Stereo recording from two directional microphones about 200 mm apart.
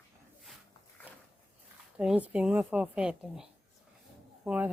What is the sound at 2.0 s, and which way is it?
Speech, 5° right (ahead or behind).